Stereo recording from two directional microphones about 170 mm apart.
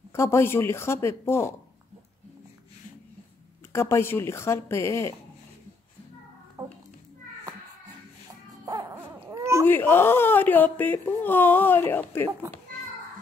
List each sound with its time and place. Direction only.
0.1 s speech: 15° left (ahead or behind)
3.7 s speech: 15° left (ahead or behind)
6.6 s a sound: 10° right (ahead or behind)
8.6 s music: 25° right (ahead or behind)
8.9 s baby cry: 15° right (ahead or behind)
9.7 s speech: 10° left (ahead or behind)